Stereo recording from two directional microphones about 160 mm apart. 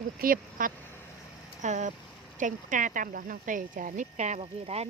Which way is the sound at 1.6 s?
45° right (ahead or behind).